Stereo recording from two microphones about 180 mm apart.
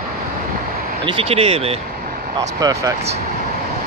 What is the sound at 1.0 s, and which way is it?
Speech, 30° right (ahead or behind).